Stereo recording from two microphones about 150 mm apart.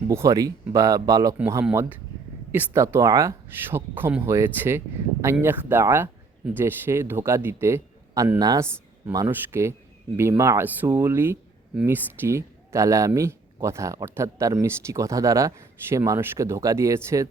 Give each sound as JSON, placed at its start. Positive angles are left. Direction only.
{"t": 0.1, "sound": "a man's voice", "side_deg": -20}